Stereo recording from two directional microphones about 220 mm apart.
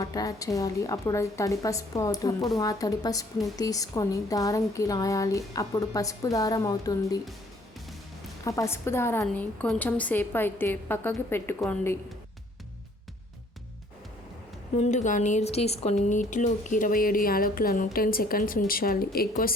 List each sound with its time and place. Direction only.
0.0 s a woman's voice: 15° left (ahead or behind)
8.4 s a woman's voice: 15° left (ahead or behind)
14.8 s speech: 35° left (ahead or behind)